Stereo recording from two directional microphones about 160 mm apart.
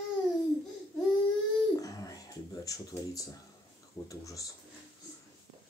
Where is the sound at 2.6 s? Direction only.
20° left (ahead or behind).